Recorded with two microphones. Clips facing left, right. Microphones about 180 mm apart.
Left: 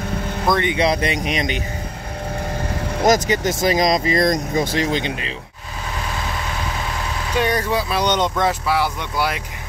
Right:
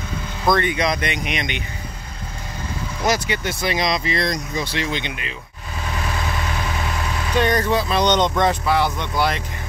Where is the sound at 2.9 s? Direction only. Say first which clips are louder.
Left 6 dB; 45° left (ahead or behind).